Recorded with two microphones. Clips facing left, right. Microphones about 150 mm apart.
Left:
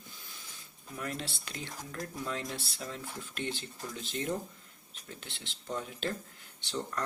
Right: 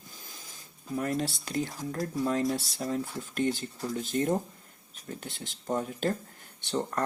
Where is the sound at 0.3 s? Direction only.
40° right (ahead or behind).